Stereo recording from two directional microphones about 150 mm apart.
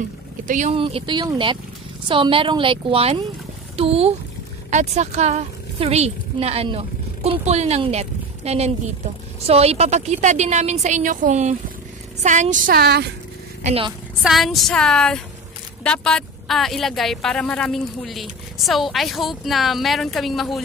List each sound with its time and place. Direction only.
0.5 s speech: 55° right (ahead or behind)
0.7 s a woman's voice: 40° right (ahead or behind); by 12.7 s 55° right (ahead or behind)
12.7 s speech: 90° right
13.7 s a woman's voice: 40° right (ahead or behind)
14.2 s speech: centre (ahead or behind)